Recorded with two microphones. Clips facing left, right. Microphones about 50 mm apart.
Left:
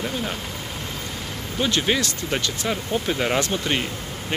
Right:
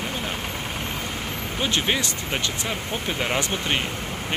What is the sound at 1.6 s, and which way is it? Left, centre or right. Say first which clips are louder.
Speech: left 2 dB; centre.